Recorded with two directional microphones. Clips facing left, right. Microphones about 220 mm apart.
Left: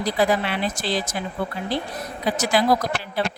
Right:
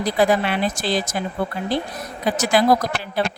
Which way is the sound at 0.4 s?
45° right (ahead or behind).